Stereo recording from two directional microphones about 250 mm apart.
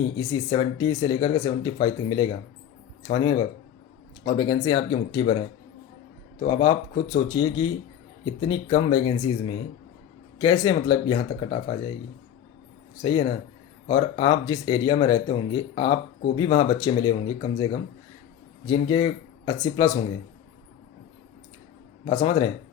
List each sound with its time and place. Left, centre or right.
0.0 s speech: centre
6.4 s speech: centre
13.0 s speech: centre
22.0 s speech: centre